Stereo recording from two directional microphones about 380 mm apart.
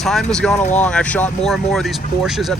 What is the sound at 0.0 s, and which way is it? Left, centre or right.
Speech, centre.